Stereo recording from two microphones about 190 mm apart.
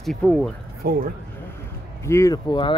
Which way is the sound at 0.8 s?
50° right (ahead or behind).